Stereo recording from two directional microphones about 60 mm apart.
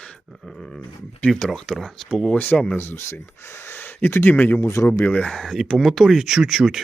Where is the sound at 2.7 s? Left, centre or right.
Left.